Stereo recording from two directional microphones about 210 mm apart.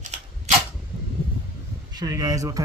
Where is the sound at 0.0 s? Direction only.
35° right (ahead or behind).